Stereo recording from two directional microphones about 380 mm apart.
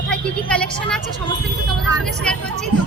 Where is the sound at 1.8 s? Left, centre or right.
Centre.